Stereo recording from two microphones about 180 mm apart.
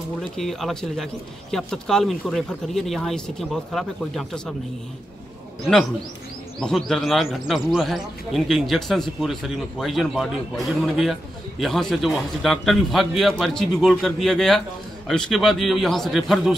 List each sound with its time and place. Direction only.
0.2 s speech: centre (ahead or behind)
6.6 s speech: centre (ahead or behind)
11.6 s speech: centre (ahead or behind)